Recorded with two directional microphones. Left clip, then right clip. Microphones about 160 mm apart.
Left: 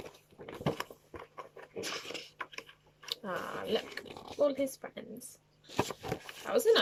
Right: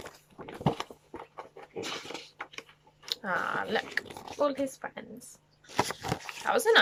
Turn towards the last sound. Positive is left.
turn(degrees=25)  # may be behind; listen again after turning